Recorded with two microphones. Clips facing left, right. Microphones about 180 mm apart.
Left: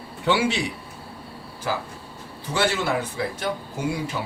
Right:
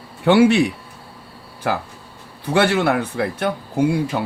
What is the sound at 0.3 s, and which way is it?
A man's voice, 55° right (ahead or behind).